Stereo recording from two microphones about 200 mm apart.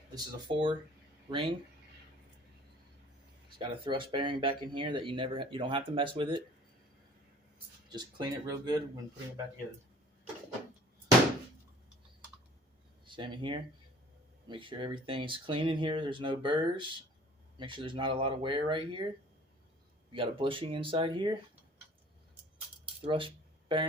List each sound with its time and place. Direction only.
0.1 s speech: 20° right (ahead or behind)
3.6 s speech: 25° right (ahead or behind)
7.9 s speech: 20° right (ahead or behind)
13.1 s speech: 25° right (ahead or behind)
20.1 s speech: 25° right (ahead or behind)
23.0 s a sound: 25° right (ahead or behind)